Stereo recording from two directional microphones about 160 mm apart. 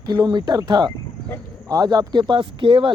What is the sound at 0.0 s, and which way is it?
Speech, 25° right (ahead or behind).